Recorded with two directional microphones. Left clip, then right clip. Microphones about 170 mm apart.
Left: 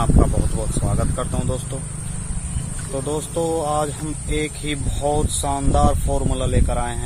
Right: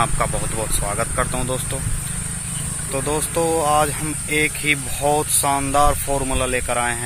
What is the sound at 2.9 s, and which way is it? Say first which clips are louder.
Speech: right 2 dB; centre (ahead or behind).